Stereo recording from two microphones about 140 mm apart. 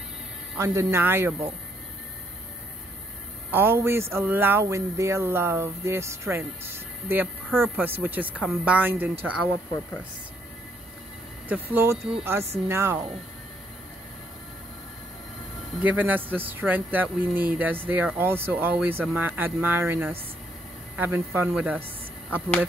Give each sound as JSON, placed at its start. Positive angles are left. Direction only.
{"t": 0.6, "sound": "speech", "side_deg": -20}
{"t": 3.5, "sound": "speech", "side_deg": -15}
{"t": 11.4, "sound": "speech", "side_deg": -15}
{"t": 15.8, "sound": "speech", "side_deg": -10}